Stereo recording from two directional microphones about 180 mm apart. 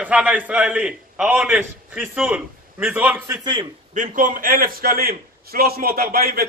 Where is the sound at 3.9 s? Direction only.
45° right (ahead or behind).